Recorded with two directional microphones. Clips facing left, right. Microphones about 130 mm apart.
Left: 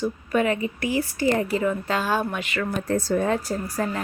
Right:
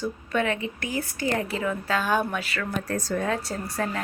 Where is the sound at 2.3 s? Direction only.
20° left (ahead or behind).